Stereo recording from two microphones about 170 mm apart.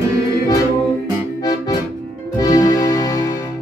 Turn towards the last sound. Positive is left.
turn(degrees=20)  # may be behind; listen again after turning